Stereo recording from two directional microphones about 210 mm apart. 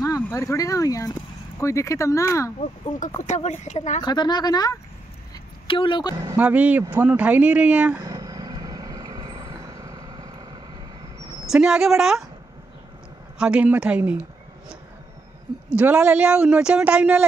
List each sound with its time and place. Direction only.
0.0 s speech: 15° left (ahead or behind)
3.2 s speech: 35° left (ahead or behind)
4.0 s speech: 20° left (ahead or behind)
6.1 s speech: 10° right (ahead or behind)
8.1 s vehicle: 15° right (ahead or behind)
11.4 s speech: 5° right (ahead or behind)
13.4 s speech: 5° right (ahead or behind)
15.7 s speech: 5° right (ahead or behind)